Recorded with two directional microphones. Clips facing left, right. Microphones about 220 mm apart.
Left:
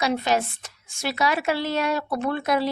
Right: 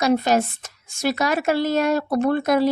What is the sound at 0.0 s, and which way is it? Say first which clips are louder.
A woman's voice: right 5 dB; 45° right (ahead or behind).